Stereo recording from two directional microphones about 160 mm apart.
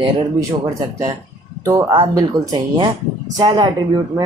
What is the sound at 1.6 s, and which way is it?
A man's voice, 20° right (ahead or behind).